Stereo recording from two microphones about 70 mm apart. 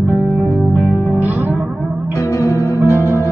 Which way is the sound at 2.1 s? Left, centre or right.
Left.